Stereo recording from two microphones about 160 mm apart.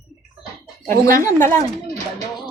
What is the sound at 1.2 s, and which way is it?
Speech, 15° left (ahead or behind).